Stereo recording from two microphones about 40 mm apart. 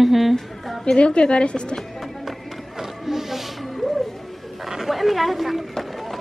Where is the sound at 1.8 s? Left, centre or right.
Centre.